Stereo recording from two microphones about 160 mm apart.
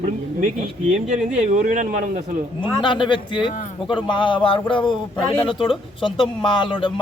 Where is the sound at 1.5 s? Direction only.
50° right (ahead or behind).